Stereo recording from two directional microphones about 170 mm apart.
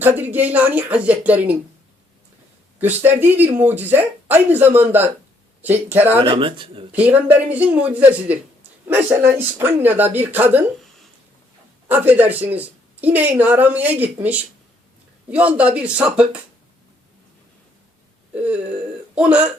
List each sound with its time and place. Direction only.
0.0 s a woman's voice: 10° right (ahead or behind)
2.8 s a woman's voice: 10° right (ahead or behind)
6.1 s speech: 30° right (ahead or behind)
6.9 s a woman's voice: 10° right (ahead or behind)
11.9 s a woman's voice: 10° right (ahead or behind)
18.3 s a sound: 10° right (ahead or behind)
19.1 s a woman's voice: 5° right (ahead or behind)